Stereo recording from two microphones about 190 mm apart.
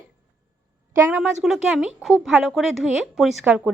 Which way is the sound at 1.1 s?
5° right (ahead or behind).